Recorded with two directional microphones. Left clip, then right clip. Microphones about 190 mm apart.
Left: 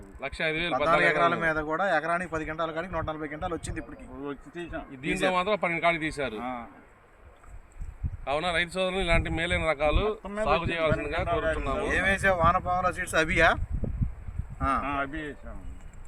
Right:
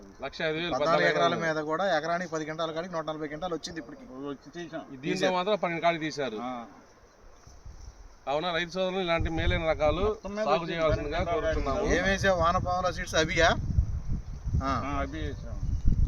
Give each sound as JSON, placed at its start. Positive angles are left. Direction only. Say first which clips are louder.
{"t": 0.2, "sound": "speech", "louder": "left 2 dB", "side_deg": 10}
{"t": 0.9, "sound": "a man's voice", "louder": "left 2 dB", "side_deg": -15}
{"t": 5.3, "sound": "speech", "louder": "left 1 dB", "side_deg": 10}
{"t": 6.4, "sound": "speech", "louder": "left 1 dB", "side_deg": -25}
{"t": 8.2, "sound": "speech", "louder": "left 2 dB", "side_deg": 15}
{"t": 11.3, "sound": "a man's voice", "louder": "left 1 dB", "side_deg": -20}
{"t": 14.6, "sound": "speech", "louder": "left 3 dB", "side_deg": -15}